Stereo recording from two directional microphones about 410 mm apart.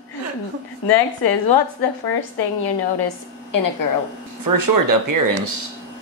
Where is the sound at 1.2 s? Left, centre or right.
Left.